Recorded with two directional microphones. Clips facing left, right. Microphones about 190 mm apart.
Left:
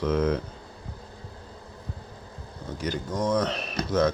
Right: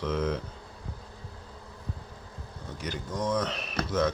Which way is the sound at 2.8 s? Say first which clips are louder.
Left 4 dB; 40° left (ahead or behind).